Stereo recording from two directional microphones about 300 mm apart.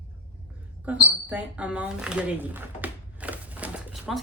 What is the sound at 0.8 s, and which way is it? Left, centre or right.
Speech, centre.